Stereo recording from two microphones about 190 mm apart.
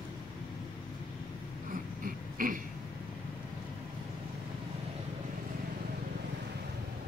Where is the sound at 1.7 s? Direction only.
45° right (ahead or behind).